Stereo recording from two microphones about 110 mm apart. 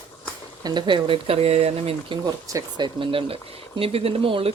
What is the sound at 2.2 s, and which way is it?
Speech, 40° right (ahead or behind).